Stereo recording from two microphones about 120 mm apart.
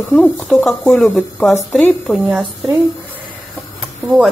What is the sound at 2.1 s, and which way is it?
Speech, centre (ahead or behind).